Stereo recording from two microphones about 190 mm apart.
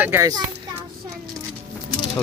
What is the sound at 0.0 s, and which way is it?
Speech, 15° right (ahead or behind).